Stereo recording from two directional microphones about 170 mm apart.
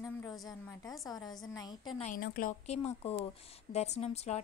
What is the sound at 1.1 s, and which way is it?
Speech, 25° left (ahead or behind).